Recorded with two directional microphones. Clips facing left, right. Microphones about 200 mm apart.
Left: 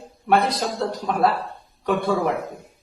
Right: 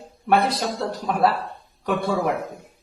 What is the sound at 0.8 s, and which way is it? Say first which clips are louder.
A woman's voice: even; centre (ahead or behind).